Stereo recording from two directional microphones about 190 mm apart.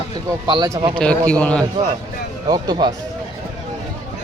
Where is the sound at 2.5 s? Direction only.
20° right (ahead or behind).